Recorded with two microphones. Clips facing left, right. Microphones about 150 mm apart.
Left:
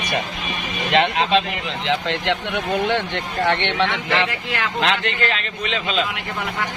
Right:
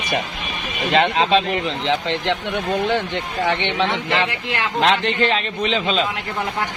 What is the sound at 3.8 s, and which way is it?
Speech, 25° right (ahead or behind).